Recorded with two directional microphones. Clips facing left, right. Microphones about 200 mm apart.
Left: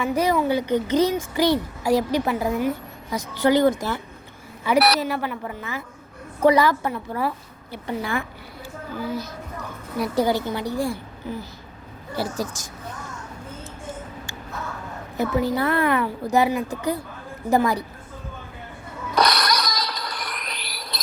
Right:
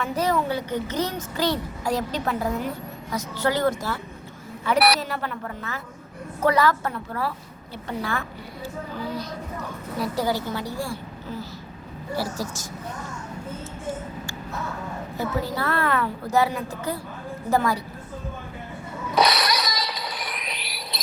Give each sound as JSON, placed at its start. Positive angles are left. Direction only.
{"t": 0.0, "sound": "a woman's voice", "side_deg": 10}
{"t": 10.0, "sound": "a woman's voice", "side_deg": 20}
{"t": 15.2, "sound": "a woman's voice", "side_deg": 20}
{"t": 19.1, "sound": "a sound", "side_deg": -5}